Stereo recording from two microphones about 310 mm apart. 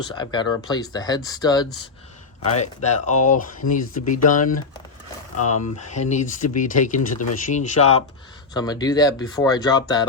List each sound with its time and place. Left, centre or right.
0.1 s speech: centre
3.6 s speech: left
4.1 s speech: left
5.4 s speech: left
5.9 s speech: left